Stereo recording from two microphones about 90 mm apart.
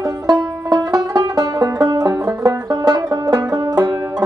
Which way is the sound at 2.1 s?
35° right (ahead or behind).